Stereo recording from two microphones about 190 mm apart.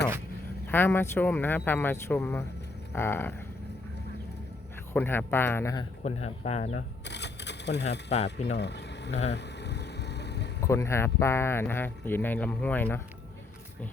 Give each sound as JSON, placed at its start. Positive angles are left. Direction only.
{"t": 0.7, "sound": "speech", "side_deg": 10}
{"t": 4.9, "sound": "speech", "side_deg": 10}
{"t": 6.0, "sound": "speech", "side_deg": 35}
{"t": 7.1, "sound": "typewriter", "side_deg": 65}
{"t": 7.9, "sound": "speech", "side_deg": 35}
{"t": 8.5, "sound": "a sound", "side_deg": 65}
{"t": 9.3, "sound": "vehicle", "side_deg": 65}
{"t": 10.6, "sound": "speech", "side_deg": 15}